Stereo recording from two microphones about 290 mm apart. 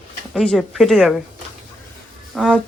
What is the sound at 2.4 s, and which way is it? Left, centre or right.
Speech, centre.